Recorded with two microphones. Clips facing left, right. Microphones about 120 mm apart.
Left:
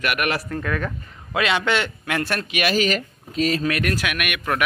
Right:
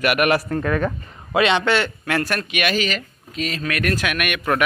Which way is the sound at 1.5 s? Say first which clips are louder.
Right 3 dB; 15° left (ahead or behind).